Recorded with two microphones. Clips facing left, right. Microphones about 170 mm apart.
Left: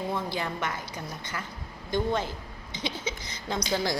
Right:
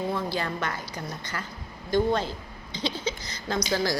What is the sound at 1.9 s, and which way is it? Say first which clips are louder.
Speech: right 4 dB; 15° left (ahead or behind).